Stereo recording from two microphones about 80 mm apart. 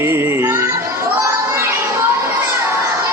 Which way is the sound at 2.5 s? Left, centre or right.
Right.